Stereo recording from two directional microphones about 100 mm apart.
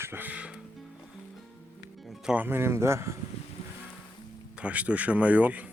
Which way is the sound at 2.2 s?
15° right (ahead or behind).